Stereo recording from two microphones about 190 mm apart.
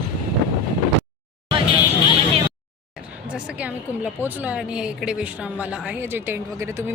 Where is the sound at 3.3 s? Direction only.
5° right (ahead or behind).